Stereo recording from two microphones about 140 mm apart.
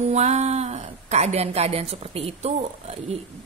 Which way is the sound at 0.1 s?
55° right (ahead or behind).